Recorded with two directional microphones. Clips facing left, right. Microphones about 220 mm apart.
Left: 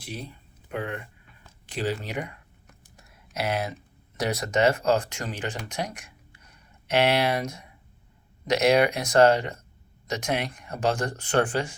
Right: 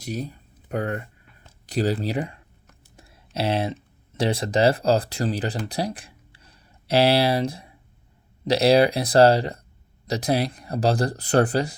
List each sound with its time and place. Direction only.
0.0 s speech: 40° right (ahead or behind)
3.0 s a sound: 30° right (ahead or behind)
4.2 s speech: 30° right (ahead or behind)